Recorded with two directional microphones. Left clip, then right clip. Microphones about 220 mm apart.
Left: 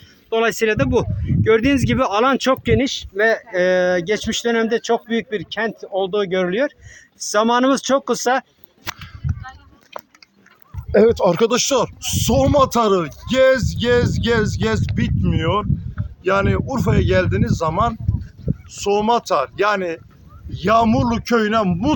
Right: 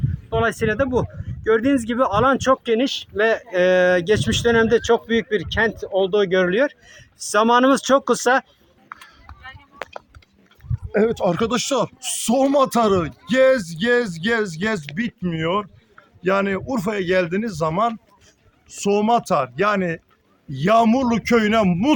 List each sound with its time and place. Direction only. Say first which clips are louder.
0.3 s speech: left 3 dB; 45° left (ahead or behind)
2.8 s speech: left 2 dB; 15° left (ahead or behind); by 8.4 s 10° right (ahead or behind)
11.1 s speech: left 5 dB; 20° left (ahead or behind); by 17.9 s 5° right (ahead or behind)
18.8 s speech: left 1 dB; 10° left (ahead or behind)
20.5 s speech: left 1 dB; 10° right (ahead or behind); by 21.9 s 25° right (ahead or behind)